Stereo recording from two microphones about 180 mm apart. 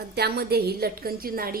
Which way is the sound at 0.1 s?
65° right (ahead or behind).